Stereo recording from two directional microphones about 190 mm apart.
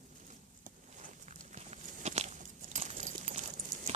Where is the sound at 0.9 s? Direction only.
40° right (ahead or behind).